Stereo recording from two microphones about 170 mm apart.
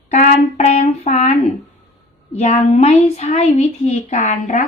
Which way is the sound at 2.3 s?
40° left (ahead or behind).